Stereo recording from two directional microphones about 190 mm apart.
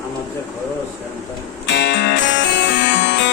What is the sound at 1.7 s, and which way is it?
Music, 65° left (ahead or behind).